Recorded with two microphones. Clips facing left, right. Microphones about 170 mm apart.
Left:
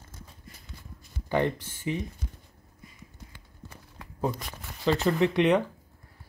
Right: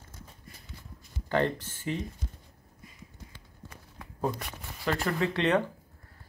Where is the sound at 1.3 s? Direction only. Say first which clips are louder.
Left 1 dB; 15° left (ahead or behind).